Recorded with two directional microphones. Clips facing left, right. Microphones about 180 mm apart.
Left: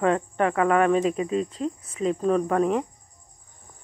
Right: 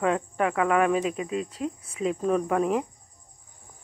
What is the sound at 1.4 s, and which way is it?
Speech, 5° right (ahead or behind).